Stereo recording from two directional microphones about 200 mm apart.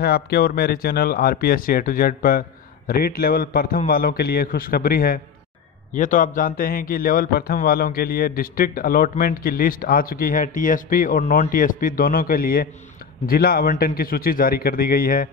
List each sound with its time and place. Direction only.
0.0 s speech: 50° left (ahead or behind)